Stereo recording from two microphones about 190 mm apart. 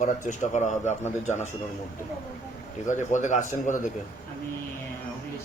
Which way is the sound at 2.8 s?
40° left (ahead or behind).